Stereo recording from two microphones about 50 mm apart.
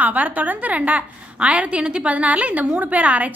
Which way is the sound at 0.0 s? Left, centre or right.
Right.